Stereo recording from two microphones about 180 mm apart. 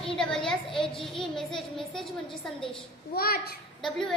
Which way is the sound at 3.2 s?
60° left (ahead or behind).